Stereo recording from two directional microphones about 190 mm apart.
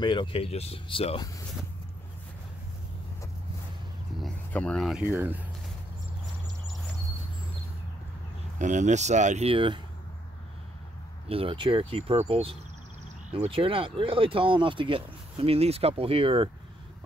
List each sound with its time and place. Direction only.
0.0 s speech: 25° left (ahead or behind)
4.2 s speech: 5° left (ahead or behind); by 5.5 s 10° right (ahead or behind)
8.5 s speech: 40° right (ahead or behind)
11.2 s speech: 30° right (ahead or behind)